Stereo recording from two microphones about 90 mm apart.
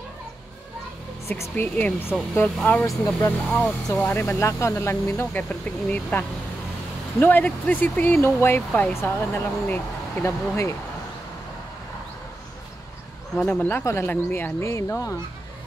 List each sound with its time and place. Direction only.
1.4 s speech: 25° left (ahead or behind)
13.5 s speech: 20° left (ahead or behind)